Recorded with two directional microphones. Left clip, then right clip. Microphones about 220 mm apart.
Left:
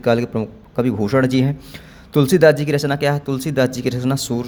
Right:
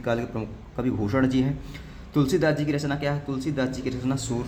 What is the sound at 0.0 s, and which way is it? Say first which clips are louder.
A man's voice: left 10 dB; 35° left (ahead or behind).